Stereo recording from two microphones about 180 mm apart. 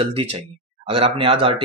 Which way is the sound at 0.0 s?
30° right (ahead or behind).